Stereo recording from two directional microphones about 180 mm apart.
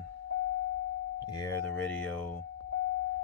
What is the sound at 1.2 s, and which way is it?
Speech, 20° left (ahead or behind).